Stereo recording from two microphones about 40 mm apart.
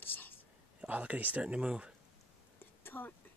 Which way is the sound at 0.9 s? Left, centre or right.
Right.